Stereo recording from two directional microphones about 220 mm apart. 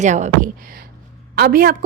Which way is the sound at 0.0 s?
35° right (ahead or behind).